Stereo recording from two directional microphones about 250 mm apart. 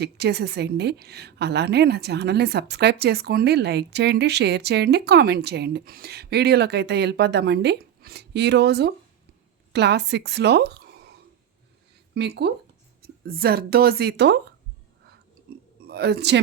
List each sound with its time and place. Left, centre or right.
0.0 s a woman's voice: right
12.1 s a woman's voice: right
15.9 s a woman's voice: right